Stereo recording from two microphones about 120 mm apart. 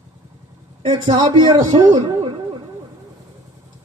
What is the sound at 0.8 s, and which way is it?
A man's voice, 40° right (ahead or behind).